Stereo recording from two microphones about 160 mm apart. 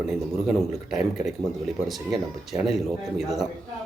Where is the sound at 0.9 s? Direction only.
5° right (ahead or behind).